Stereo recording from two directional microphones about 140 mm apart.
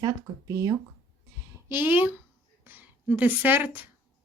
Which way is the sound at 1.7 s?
15° right (ahead or behind).